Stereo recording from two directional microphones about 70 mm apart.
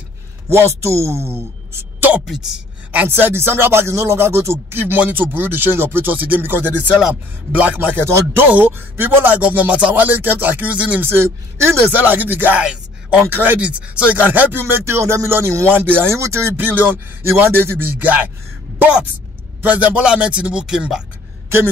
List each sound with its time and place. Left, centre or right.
0.5 s speech: right
2.2 s a woman's voice: centre
2.9 s speech: right
8.0 s speech: right
8.5 s speech: right
10.0 s speech: right
11.1 s speech: right
12.1 s speech: right
12.5 s a sound: centre
13.3 s speech: right
14.7 s speech: right
16.2 s speech: right
16.5 s speech: right
19.6 s speech: right